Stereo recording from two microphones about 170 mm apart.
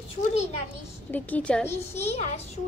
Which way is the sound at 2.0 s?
40° left (ahead or behind).